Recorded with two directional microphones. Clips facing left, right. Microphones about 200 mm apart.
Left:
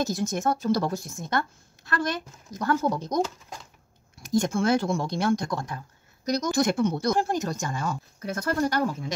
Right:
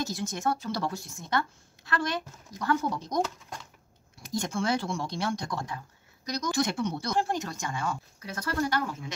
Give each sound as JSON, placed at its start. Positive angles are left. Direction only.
{"t": 0.0, "sound": "speech", "side_deg": 45}
{"t": 2.6, "sound": "speech", "side_deg": 45}
{"t": 4.2, "sound": "speech", "side_deg": 45}